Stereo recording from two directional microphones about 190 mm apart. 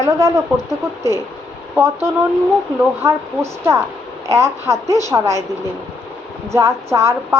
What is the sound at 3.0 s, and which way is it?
A woman's voice, 15° right (ahead or behind).